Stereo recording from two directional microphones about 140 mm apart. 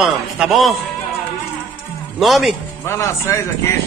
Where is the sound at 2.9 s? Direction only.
20° left (ahead or behind).